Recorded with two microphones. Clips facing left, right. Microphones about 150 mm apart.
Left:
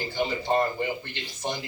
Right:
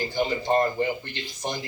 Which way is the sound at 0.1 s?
15° right (ahead or behind).